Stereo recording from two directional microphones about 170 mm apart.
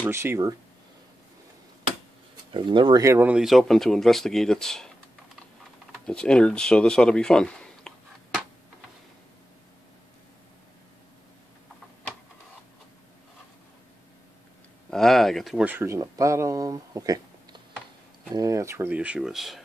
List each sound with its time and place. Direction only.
0.1 s speech: 15° right (ahead or behind)
2.5 s speech: 30° right (ahead or behind); by 4.9 s 5° left (ahead or behind)
6.0 s speech: 5° left (ahead or behind)
14.9 s speech: centre (ahead or behind)